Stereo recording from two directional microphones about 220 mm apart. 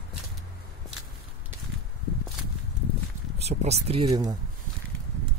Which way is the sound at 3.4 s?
30° right (ahead or behind).